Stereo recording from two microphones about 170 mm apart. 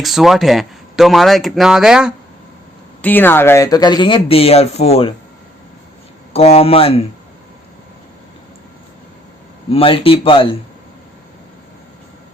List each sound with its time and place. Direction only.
0.0 s speech: centre (ahead or behind)
3.0 s speech: 10° left (ahead or behind); by 5.1 s 35° left (ahead or behind)
6.3 s speech: 35° left (ahead or behind)
9.6 s speech: 35° left (ahead or behind)